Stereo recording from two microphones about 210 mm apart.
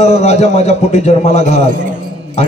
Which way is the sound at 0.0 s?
30° left (ahead or behind).